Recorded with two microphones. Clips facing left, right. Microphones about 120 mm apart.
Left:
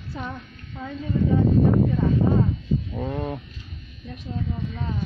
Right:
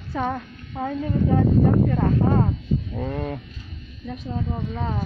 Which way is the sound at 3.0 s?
10° left (ahead or behind).